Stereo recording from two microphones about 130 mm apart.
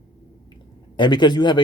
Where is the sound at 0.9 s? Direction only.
35° left (ahead or behind).